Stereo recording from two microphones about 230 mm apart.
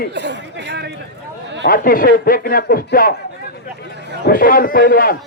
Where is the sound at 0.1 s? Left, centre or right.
Right.